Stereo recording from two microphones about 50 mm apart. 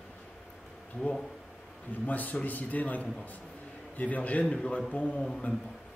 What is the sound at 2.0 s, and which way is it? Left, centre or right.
Speech, left.